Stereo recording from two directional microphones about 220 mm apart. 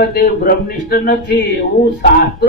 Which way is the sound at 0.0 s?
45° left (ahead or behind).